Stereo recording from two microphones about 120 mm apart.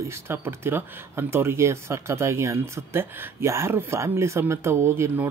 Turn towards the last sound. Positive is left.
turn(degrees=-20)  # may be behind; listen again after turning